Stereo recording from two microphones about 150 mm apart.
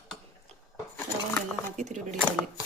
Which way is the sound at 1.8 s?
50° right (ahead or behind).